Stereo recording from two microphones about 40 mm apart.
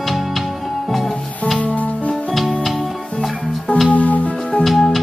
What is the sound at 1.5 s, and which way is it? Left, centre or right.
Music, left.